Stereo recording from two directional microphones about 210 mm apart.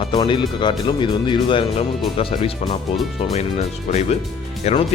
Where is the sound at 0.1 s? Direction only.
20° left (ahead or behind).